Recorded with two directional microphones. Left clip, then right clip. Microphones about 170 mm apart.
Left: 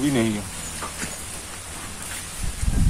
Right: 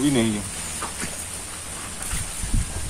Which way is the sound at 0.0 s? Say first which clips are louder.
Right 1 dB; 20° left (ahead or behind).